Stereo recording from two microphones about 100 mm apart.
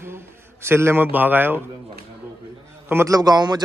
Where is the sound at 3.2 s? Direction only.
40° right (ahead or behind).